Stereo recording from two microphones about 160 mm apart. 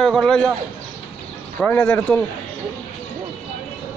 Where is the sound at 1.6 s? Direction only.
10° left (ahead or behind).